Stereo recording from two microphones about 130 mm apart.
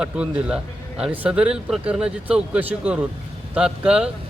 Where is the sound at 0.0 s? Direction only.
10° right (ahead or behind).